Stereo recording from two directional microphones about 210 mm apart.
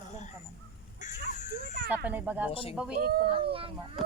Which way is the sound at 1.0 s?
35° left (ahead or behind).